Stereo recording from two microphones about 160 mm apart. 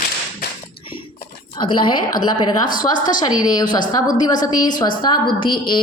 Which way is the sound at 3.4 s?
25° left (ahead or behind).